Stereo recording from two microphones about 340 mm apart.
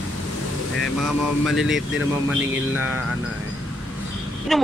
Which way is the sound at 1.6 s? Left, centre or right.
Centre.